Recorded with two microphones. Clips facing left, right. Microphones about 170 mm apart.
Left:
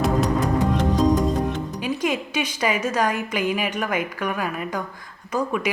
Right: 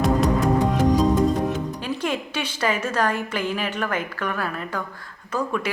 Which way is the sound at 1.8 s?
10° left (ahead or behind).